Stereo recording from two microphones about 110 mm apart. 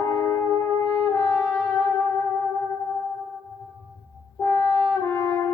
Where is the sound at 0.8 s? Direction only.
20° left (ahead or behind).